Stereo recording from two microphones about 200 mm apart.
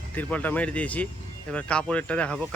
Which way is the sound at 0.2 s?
10° left (ahead or behind).